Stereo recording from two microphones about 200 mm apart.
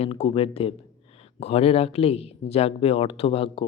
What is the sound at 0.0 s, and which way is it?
Speech, 30° left (ahead or behind).